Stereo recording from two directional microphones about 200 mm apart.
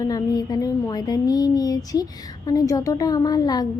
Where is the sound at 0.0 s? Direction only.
20° left (ahead or behind).